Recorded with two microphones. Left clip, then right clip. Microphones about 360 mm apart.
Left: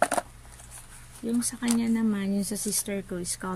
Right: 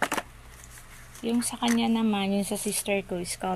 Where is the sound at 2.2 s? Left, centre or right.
Right.